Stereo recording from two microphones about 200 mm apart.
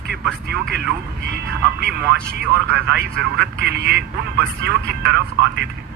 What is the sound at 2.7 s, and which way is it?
Speech, 55° right (ahead or behind).